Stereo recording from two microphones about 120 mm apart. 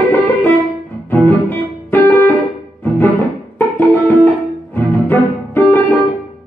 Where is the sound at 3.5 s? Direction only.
15° left (ahead or behind).